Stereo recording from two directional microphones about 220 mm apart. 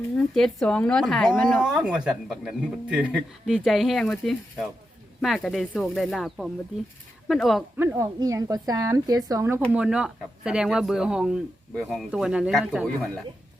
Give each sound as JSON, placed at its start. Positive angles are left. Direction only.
{"t": 0.2, "sound": "speech", "side_deg": 0}
{"t": 7.8, "sound": "speech", "side_deg": -15}
{"t": 9.7, "sound": "speech", "side_deg": -5}